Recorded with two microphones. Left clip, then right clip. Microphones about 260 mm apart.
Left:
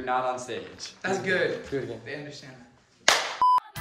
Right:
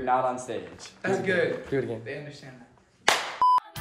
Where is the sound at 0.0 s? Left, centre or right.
Centre.